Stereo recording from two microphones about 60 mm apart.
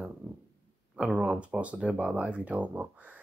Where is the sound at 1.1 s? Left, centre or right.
Centre.